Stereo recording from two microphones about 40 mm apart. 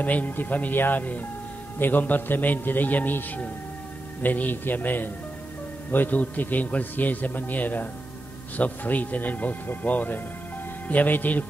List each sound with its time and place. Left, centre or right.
0.0 s a man's voice: left